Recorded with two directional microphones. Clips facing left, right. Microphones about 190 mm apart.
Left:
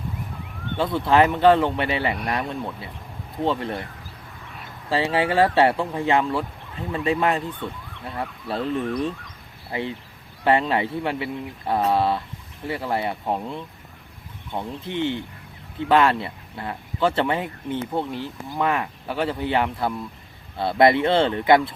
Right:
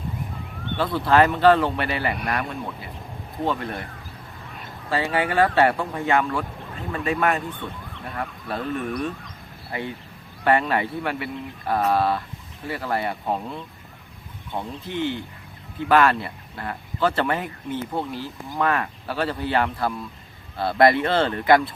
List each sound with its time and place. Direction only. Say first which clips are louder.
0.8 s speech: even; 20° left (ahead or behind)
4.9 s speech: left 2 dB; 25° left (ahead or behind)
10.4 s speech: left 1 dB; 25° left (ahead or behind)